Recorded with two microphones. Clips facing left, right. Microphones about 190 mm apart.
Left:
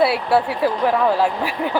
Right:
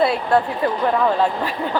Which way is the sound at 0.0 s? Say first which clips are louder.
Even; 10° left (ahead or behind).